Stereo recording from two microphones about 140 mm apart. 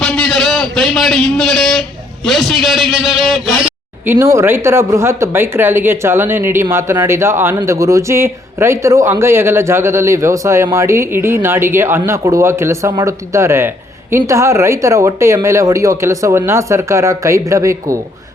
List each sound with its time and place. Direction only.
0.0 s a sound: 5° left (ahead or behind)
2.2 s a man's voice: centre (ahead or behind)
4.0 s speech: 15° right (ahead or behind)